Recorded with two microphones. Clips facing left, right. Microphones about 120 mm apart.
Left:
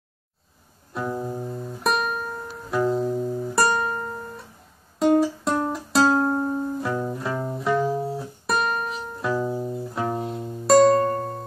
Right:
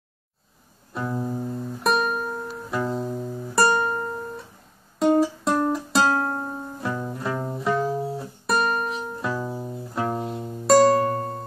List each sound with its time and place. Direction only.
1.1 s music: 5° left (ahead or behind)
3.3 s music: 15° left (ahead or behind)
3.5 s music: centre (ahead or behind)